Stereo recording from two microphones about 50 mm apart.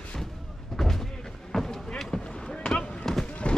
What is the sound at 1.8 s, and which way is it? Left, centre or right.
Boat, centre.